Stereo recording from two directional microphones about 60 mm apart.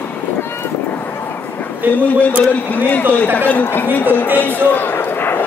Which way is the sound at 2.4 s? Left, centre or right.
Left.